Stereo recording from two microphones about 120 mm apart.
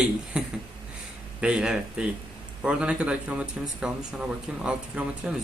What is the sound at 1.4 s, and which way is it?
Speech, 5° right (ahead or behind).